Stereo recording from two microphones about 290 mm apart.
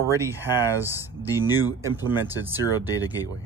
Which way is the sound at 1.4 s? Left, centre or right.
Centre.